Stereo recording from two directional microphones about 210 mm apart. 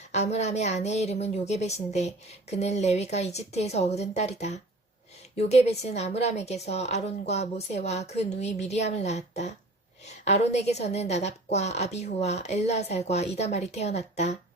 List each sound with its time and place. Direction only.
0.1 s a woman's voice: 30° left (ahead or behind)